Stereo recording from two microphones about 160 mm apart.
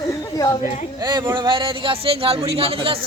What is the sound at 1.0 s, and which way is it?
Speech, 25° right (ahead or behind).